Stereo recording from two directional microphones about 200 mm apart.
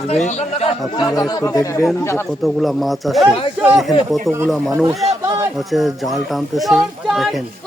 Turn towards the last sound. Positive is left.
turn(degrees=0)  # may be behind; listen again after turning